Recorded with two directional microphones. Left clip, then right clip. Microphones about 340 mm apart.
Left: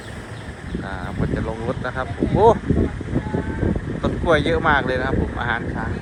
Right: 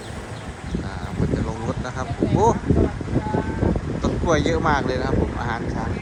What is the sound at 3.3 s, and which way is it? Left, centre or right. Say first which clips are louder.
Vehicle: right 1 dB; centre.